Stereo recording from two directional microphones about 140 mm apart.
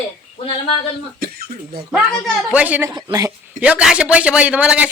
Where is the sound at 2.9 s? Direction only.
30° right (ahead or behind).